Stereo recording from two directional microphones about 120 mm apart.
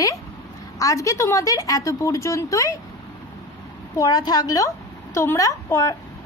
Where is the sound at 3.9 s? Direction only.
30° left (ahead or behind).